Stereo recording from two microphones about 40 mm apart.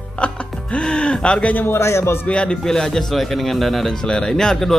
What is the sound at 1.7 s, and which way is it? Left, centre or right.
Speech, left.